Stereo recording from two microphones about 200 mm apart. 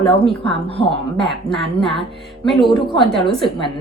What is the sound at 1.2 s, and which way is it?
A woman's voice, centre (ahead or behind).